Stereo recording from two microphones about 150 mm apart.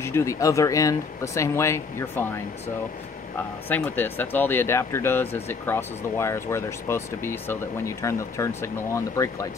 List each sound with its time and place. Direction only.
0.0 s speech: 20° left (ahead or behind)
3.6 s speech: 10° left (ahead or behind)